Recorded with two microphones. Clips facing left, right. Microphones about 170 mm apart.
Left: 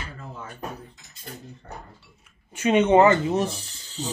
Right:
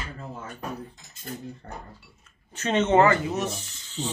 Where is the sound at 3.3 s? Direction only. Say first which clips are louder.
Left 4 dB; 30° left (ahead or behind).